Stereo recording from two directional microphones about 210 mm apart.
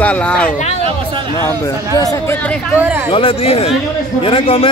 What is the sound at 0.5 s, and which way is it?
Speech, 35° left (ahead or behind).